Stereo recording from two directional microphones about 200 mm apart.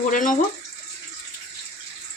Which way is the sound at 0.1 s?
40° left (ahead or behind).